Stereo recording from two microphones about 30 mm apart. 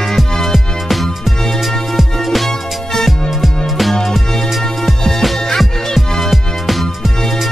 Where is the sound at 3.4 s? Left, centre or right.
Centre.